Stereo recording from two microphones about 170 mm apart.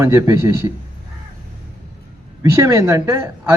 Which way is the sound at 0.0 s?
15° right (ahead or behind).